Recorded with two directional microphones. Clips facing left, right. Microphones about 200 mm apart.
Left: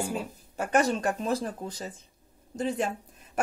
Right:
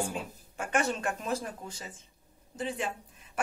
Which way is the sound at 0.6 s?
40° left (ahead or behind).